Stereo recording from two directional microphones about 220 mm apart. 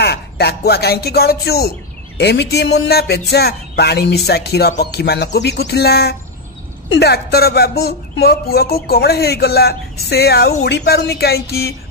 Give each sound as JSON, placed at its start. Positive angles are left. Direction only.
{"t": 0.0, "sound": "a woman's voice", "side_deg": 45}